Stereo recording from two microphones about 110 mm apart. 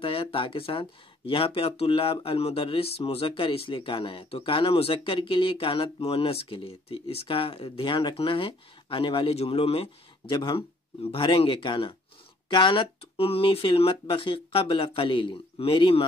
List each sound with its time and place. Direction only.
0.0 s speech: 55° left (ahead or behind)